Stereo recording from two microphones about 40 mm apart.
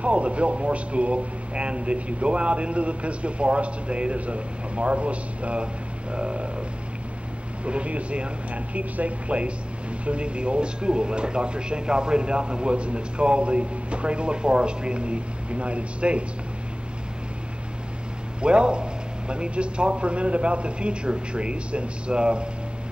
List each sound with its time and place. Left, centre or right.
0.0 s a man's voice: right
7.6 s a man's voice: right
18.4 s speech: right